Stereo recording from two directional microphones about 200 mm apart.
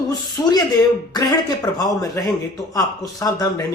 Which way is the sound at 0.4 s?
20° left (ahead or behind).